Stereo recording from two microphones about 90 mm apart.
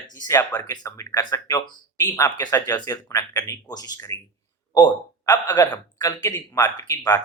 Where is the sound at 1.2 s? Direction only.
45° left (ahead or behind).